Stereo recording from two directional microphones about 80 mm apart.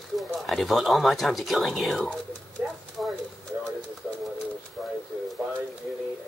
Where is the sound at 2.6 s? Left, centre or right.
Right.